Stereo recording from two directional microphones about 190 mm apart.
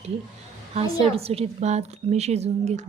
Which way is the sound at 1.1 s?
30° right (ahead or behind).